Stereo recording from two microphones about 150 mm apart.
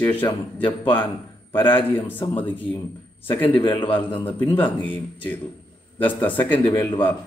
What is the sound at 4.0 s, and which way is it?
Speech, 35° left (ahead or behind).